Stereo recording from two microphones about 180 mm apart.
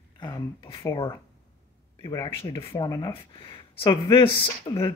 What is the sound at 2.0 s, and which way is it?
Speech, 25° left (ahead or behind).